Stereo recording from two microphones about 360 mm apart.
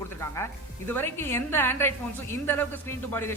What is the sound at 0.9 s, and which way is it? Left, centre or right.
A woman's voice, centre.